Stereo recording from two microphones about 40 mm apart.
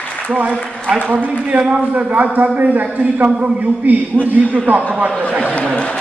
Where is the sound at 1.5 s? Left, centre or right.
Right.